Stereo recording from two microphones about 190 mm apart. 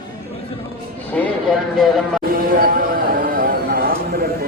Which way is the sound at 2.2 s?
50° right (ahead or behind).